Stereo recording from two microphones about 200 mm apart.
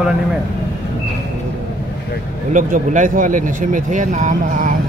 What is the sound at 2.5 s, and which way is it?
Speech, 40° right (ahead or behind).